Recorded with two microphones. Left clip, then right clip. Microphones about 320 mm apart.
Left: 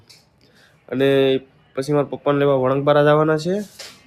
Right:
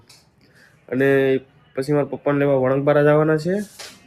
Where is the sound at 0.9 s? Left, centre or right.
Centre.